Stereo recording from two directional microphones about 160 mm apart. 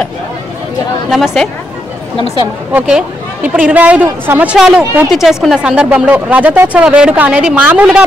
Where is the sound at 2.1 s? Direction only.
30° left (ahead or behind).